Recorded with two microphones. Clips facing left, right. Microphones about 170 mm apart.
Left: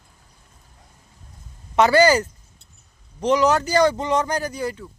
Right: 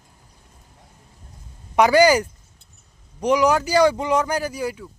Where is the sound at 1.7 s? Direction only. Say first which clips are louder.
Right 1 dB; 10° right (ahead or behind).